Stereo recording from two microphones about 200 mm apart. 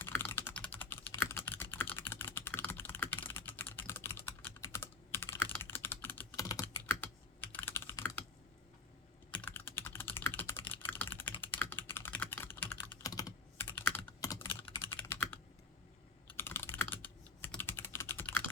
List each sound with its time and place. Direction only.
0.0 s typing: 10° left (ahead or behind)
9.3 s typing: 10° left (ahead or behind)